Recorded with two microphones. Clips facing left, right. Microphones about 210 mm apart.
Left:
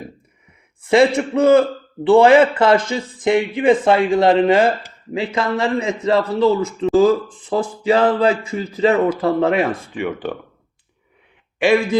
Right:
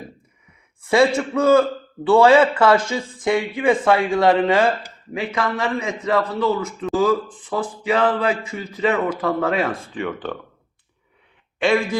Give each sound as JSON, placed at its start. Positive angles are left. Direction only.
{"t": 0.9, "sound": "a man's voice", "side_deg": 20}
{"t": 9.5, "sound": "speech", "side_deg": 15}